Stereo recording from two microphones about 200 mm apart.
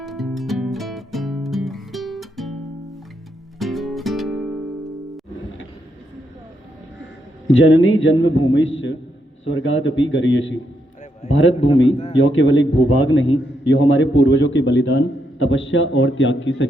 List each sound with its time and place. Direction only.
0.0 s music: centre (ahead or behind)
3.6 s music: centre (ahead or behind)
7.4 s a man's voice: 70° left (ahead or behind)
11.2 s a man's voice: 35° left (ahead or behind)
12.2 s a man's voice: 70° left (ahead or behind)